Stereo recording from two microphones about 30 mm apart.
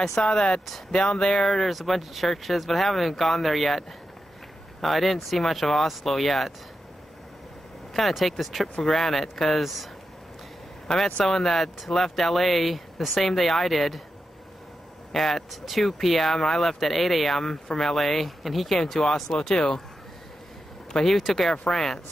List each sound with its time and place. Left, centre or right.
0.0 s speech: centre
0.3 s speech: left
1.6 s speech: centre
4.8 s speech: centre
7.9 s speech: centre
10.9 s speech: left
11.2 s speech: centre
15.1 s speech: centre
19.3 s speech: centre
21.0 s speech: centre